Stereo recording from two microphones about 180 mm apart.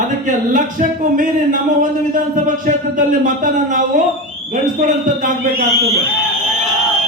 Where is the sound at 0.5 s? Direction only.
50° right (ahead or behind).